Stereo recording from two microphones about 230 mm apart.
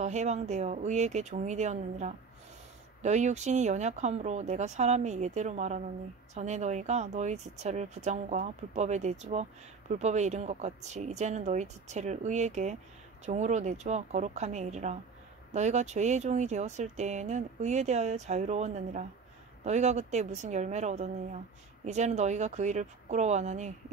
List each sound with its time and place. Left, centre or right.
0.0 s a woman's voice: right